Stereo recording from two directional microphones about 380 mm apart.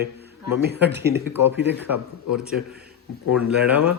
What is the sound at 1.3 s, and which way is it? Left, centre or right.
Speech, centre.